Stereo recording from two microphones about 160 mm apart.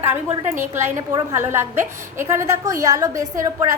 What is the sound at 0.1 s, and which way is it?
A woman's voice, 15° right (ahead or behind).